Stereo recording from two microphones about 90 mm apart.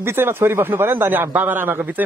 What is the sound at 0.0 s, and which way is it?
A man's voice, 25° right (ahead or behind).